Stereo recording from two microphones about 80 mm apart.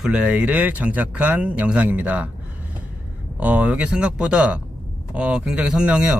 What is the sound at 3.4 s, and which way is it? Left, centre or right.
Speech, centre.